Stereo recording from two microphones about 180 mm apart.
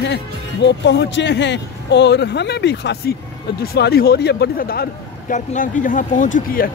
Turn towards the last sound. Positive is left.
turn(degrees=45)  # may be behind; listen again after turning